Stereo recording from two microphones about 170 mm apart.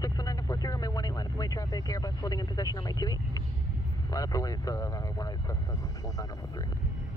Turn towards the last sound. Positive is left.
turn(degrees=20)  # may be behind; listen again after turning